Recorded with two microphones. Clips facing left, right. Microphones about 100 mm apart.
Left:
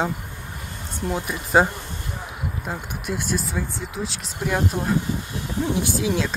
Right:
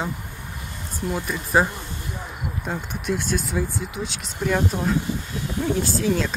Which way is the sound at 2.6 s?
5° left (ahead or behind).